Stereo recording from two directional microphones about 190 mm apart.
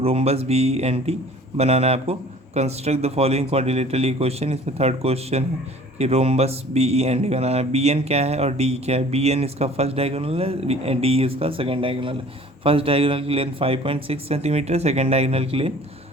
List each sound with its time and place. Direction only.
0.0 s speech: 30° right (ahead or behind)